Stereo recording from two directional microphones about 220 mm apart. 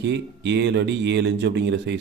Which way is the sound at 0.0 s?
55° right (ahead or behind).